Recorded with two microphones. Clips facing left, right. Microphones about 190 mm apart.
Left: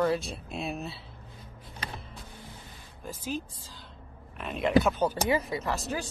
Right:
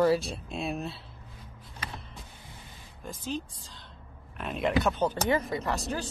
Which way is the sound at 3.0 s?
5° left (ahead or behind).